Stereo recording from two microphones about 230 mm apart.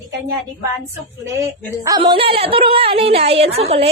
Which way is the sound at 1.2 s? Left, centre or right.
Centre.